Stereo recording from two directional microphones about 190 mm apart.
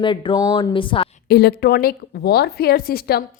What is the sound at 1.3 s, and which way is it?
A woman's voice, 55° left (ahead or behind).